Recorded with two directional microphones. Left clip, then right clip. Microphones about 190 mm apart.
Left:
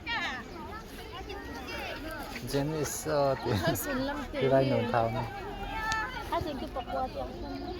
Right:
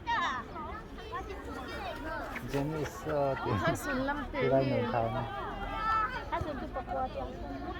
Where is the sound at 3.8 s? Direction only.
30° left (ahead or behind).